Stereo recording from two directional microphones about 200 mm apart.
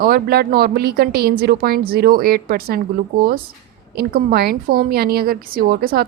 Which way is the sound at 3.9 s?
50° right (ahead or behind).